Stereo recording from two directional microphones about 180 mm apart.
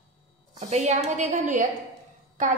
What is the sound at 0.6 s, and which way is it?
A woman's voice, 40° right (ahead or behind).